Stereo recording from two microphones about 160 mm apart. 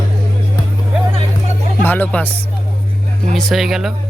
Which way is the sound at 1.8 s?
10° left (ahead or behind).